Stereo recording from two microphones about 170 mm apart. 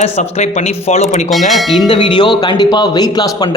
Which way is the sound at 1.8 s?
30° left (ahead or behind).